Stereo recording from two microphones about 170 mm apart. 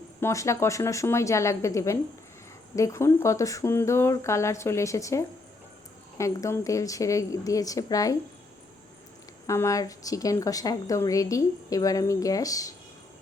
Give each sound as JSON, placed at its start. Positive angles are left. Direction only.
{"t": 0.2, "sound": "a woman's voice", "side_deg": 15}
{"t": 9.5, "sound": "a woman's voice", "side_deg": 20}